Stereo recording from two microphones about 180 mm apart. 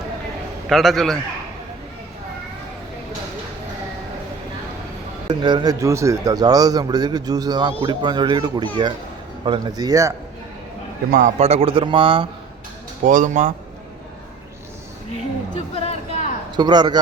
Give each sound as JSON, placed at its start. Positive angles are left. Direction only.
{"t": 0.7, "sound": "a man's voice", "side_deg": 0}
{"t": 5.3, "sound": "a man's voice", "side_deg": -25}
{"t": 11.1, "sound": "a man's voice", "side_deg": -40}
{"t": 13.1, "sound": "speech", "side_deg": -45}
{"t": 15.7, "sound": "a sound", "side_deg": 35}
{"t": 16.6, "sound": "a man's voice", "side_deg": -25}